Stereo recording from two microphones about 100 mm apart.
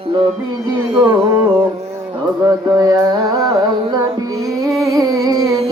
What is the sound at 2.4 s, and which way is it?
Carnatic music, 35° right (ahead or behind).